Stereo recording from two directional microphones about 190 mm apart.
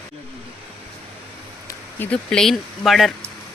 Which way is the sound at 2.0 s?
5° left (ahead or behind).